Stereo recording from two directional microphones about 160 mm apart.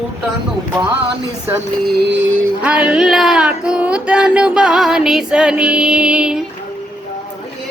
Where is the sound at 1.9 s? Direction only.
85° right.